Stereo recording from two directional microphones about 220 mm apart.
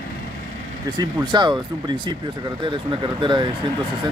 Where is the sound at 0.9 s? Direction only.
20° right (ahead or behind).